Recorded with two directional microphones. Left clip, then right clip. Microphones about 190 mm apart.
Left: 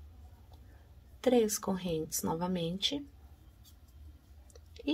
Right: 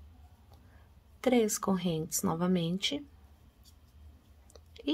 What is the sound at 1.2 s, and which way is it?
A woman's voice, 20° right (ahead or behind).